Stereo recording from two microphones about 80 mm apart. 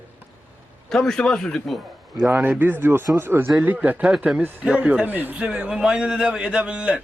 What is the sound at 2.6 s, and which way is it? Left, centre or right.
A man's voice, right.